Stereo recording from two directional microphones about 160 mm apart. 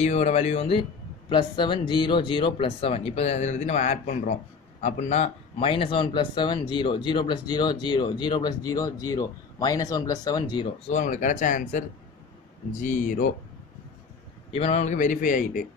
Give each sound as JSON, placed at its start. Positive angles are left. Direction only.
{"t": 0.0, "sound": "a man's voice", "side_deg": 45}
{"t": 11.0, "sound": "a man's voice", "side_deg": 55}
{"t": 12.8, "sound": "speech", "side_deg": 55}
{"t": 14.5, "sound": "a man's voice", "side_deg": 40}